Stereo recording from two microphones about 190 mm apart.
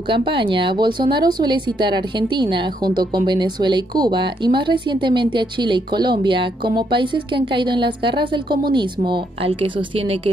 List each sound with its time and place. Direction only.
0.1 s a woman's voice: 25° right (ahead or behind)